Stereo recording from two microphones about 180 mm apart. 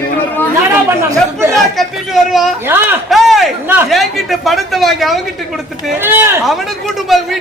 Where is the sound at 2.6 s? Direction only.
10° right (ahead or behind).